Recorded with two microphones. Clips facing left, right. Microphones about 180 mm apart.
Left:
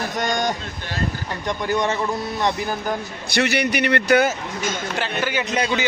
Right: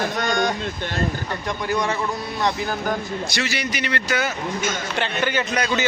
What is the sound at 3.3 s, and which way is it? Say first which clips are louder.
A man's voice: left 11 dB; 60° left (ahead or behind).